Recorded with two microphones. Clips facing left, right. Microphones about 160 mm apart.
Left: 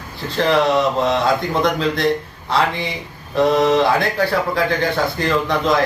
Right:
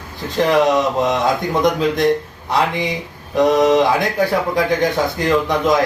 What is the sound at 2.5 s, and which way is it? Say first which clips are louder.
Speech: right 1 dB; 15° right (ahead or behind).